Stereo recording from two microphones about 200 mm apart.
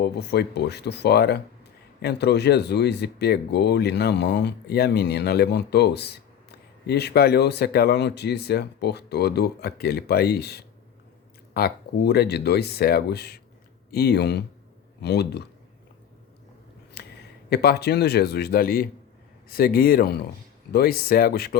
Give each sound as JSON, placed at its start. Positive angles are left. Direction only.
{"t": 0.0, "sound": "speech", "side_deg": 55}
{"t": 17.0, "sound": "a sound", "side_deg": 55}
{"t": 17.5, "sound": "speech", "side_deg": 55}